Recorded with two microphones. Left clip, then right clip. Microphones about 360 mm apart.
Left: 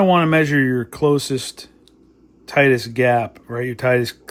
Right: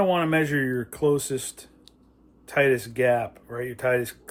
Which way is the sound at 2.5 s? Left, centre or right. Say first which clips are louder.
Left 6 dB; left.